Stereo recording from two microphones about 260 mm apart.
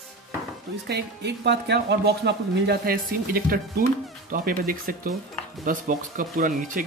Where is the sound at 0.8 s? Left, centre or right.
Right.